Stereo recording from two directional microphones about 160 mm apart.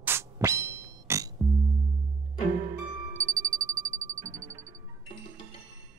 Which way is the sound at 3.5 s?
20° right (ahead or behind).